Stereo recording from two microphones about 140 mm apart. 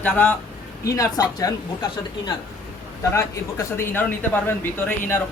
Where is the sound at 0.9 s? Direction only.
25° left (ahead or behind).